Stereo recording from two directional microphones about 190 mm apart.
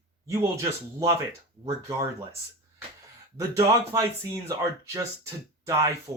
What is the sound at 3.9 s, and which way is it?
Speech, 15° right (ahead or behind).